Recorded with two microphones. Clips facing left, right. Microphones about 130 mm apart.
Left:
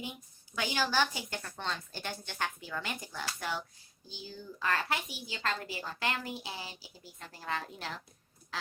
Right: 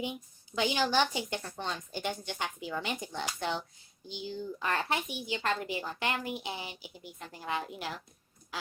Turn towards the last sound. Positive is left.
turn(degrees=-15)  # may be behind; listen again after turning